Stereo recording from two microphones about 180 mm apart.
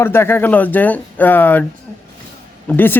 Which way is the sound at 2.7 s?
10° left (ahead or behind).